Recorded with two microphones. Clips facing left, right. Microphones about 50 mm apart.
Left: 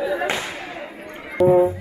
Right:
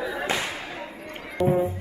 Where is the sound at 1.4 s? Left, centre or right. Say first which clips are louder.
Left 8 dB; left.